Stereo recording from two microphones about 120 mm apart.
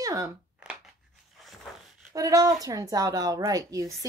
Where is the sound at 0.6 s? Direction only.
10° right (ahead or behind).